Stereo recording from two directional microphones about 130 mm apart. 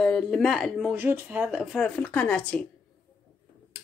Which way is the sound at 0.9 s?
15° right (ahead or behind).